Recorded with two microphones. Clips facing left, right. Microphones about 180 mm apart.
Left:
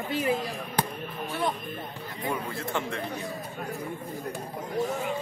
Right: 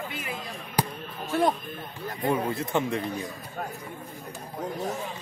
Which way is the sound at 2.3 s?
20° right (ahead or behind).